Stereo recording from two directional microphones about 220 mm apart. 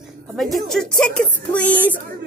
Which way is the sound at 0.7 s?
5° left (ahead or behind).